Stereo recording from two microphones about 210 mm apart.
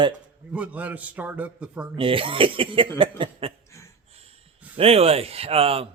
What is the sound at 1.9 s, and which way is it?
Speech, 25° right (ahead or behind).